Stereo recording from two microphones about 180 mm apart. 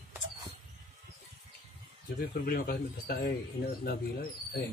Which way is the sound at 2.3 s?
55° left (ahead or behind).